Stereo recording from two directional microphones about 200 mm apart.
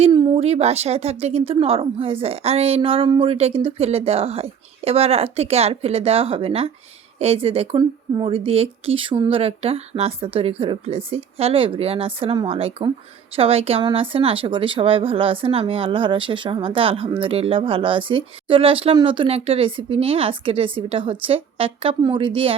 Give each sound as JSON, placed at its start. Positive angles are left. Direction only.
{"t": 0.0, "sound": "speech", "side_deg": -25}